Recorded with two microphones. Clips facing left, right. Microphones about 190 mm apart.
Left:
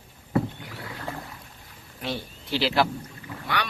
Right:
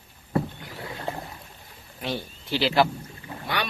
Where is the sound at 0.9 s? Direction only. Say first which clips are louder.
Right 3 dB; 25° right (ahead or behind).